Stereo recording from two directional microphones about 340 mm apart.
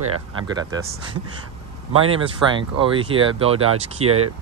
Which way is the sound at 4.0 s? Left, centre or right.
Right.